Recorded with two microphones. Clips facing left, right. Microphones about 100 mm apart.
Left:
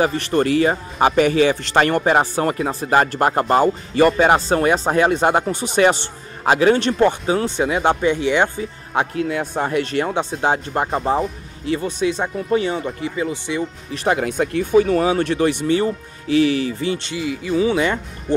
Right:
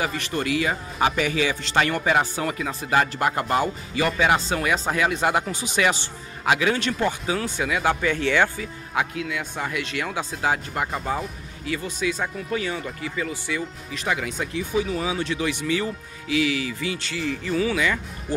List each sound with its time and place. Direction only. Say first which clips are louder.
0.0 s speech: left 8 dB; 40° left (ahead or behind)
6.4 s speech: left 7 dB; 35° left (ahead or behind); by 8.6 s 20° left (ahead or behind)
8.9 s speech: left 6 dB; 40° left (ahead or behind)
14.0 s speech: left 8 dB; 45° left (ahead or behind)
17.1 s speech: left 4 dB; 10° left (ahead or behind)
17.6 s speech: left 6 dB; 30° left (ahead or behind)